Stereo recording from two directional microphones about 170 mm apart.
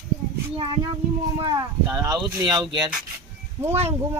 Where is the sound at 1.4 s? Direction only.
20° right (ahead or behind).